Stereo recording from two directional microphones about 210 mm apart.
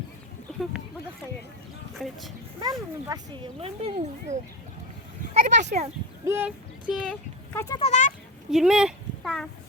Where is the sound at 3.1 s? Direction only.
20° right (ahead or behind).